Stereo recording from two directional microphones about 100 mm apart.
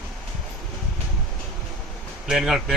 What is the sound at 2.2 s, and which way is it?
Speech, 5° right (ahead or behind).